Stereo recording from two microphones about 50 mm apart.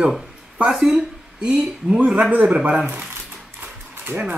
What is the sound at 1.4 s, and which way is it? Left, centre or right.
Speech, right.